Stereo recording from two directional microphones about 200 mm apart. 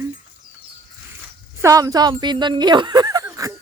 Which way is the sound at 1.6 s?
15° right (ahead or behind).